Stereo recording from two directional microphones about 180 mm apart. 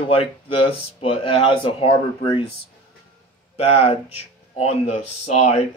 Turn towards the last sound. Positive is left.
turn(degrees=40)  # may be behind; listen again after turning